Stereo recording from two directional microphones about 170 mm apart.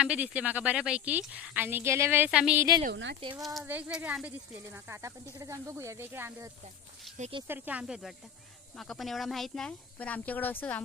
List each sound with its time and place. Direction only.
0.0 s speech: 5° right (ahead or behind)
2.9 s speech: 90° right
3.6 s speech: 10° right (ahead or behind)
7.2 s speech: 35° right (ahead or behind)
7.4 s speech: 10° right (ahead or behind); by 10.8 s 10° left (ahead or behind)